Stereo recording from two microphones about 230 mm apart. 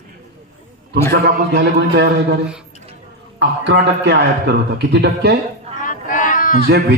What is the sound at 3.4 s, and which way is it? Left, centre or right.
A man's voice, right.